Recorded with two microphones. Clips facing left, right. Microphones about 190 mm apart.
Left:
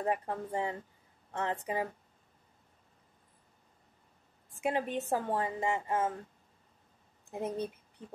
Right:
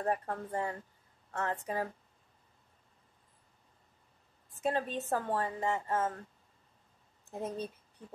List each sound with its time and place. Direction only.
0.0 s a woman's voice: 15° left (ahead or behind)
4.6 s a woman's voice: 15° left (ahead or behind)
7.2 s speech: 15° left (ahead or behind)